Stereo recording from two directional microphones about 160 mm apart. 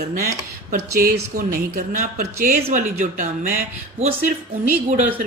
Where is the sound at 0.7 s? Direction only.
65° right (ahead or behind).